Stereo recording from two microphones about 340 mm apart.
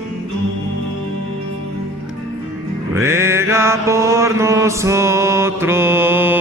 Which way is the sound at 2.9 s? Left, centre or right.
Centre.